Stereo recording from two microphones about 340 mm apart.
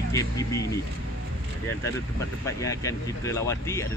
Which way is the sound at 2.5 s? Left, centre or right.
Centre.